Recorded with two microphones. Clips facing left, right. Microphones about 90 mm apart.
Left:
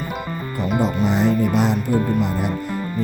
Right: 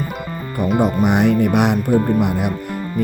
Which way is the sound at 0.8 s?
60° right (ahead or behind).